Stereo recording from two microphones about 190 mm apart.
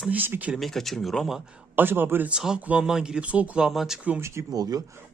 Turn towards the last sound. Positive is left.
turn(degrees=-20)  # may be behind; listen again after turning